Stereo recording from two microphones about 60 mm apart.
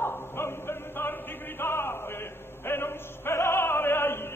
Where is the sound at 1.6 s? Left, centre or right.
Left.